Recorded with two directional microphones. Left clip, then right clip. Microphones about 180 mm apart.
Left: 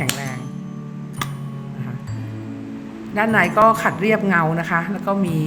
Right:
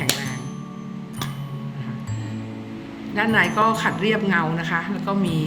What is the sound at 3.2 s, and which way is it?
A woman's voice, 50° left (ahead or behind).